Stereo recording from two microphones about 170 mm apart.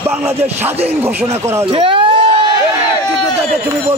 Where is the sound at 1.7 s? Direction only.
30° right (ahead or behind).